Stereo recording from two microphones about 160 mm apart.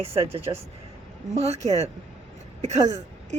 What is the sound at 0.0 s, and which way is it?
A woman's voice, 40° right (ahead or behind).